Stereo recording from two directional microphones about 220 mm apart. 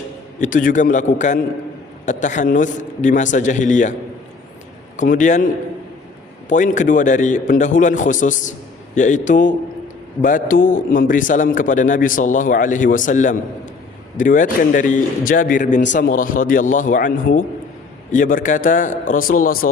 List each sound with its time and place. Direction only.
0.3 s a man's voice: 35° left (ahead or behind)
4.9 s a man's voice: 35° left (ahead or behind)
6.5 s a man's voice: 35° left (ahead or behind)